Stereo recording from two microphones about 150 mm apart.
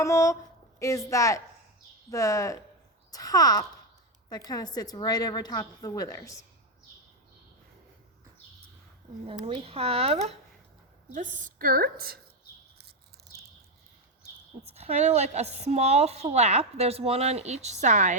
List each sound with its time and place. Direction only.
0.0 s a woman's voice: 20° left (ahead or behind)
9.2 s speech: 35° right (ahead or behind)
11.1 s a woman's voice: 60° right (ahead or behind); by 12.2 s 90° right
14.8 s speech: 45° right (ahead or behind)